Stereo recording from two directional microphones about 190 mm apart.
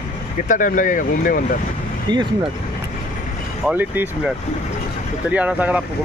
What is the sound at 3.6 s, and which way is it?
Speech, 10° right (ahead or behind).